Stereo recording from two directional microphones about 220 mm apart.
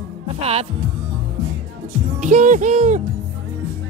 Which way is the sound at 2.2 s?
35° right (ahead or behind).